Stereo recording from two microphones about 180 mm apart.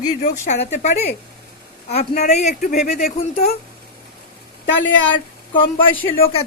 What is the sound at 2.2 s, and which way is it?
Speech, 45° left (ahead or behind).